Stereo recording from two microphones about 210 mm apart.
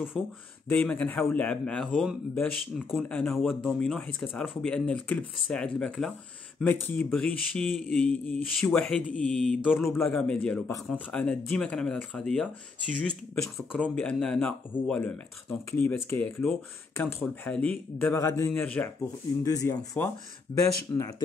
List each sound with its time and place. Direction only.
0.2 s a man's voice: 5° left (ahead or behind)